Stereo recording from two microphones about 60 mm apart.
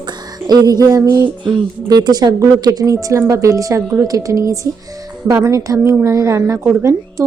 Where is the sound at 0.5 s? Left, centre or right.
Right.